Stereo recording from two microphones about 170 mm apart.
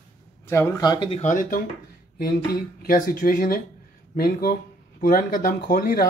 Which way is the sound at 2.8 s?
55° left (ahead or behind).